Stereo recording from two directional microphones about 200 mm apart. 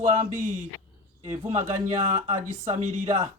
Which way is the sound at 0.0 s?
40° right (ahead or behind).